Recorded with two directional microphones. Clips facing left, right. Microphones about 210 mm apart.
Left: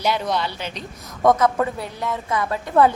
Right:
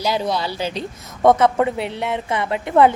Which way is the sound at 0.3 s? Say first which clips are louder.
Right 3 dB; 35° right (ahead or behind).